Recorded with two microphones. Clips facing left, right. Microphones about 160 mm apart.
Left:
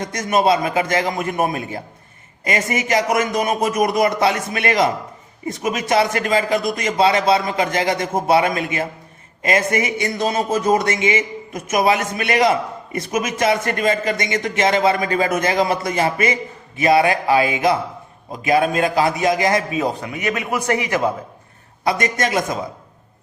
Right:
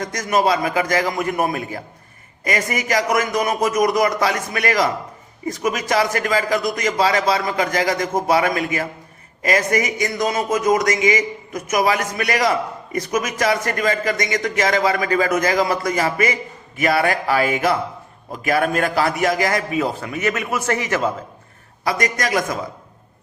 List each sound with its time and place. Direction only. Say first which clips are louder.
0.0 s a man's voice: left 1 dB; 25° left (ahead or behind)